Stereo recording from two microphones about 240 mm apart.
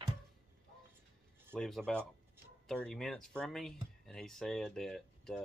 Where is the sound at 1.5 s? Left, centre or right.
Centre.